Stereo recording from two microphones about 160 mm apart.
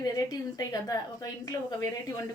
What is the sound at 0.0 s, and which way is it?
A woman's voice, 25° left (ahead or behind).